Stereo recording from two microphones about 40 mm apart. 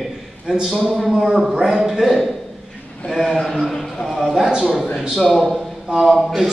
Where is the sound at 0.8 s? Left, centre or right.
Centre.